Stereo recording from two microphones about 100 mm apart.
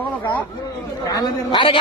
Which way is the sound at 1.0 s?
40° left (ahead or behind).